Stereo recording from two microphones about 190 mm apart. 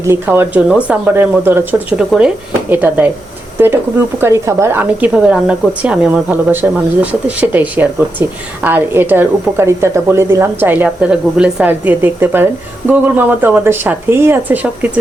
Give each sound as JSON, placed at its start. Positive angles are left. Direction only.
{"t": 0.0, "sound": "speech", "side_deg": -10}